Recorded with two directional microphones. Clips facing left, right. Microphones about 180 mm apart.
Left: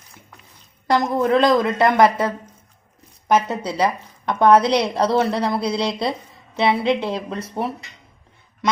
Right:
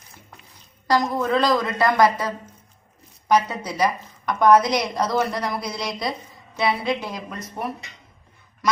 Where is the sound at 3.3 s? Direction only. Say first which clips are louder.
Left 2 dB; 25° left (ahead or behind).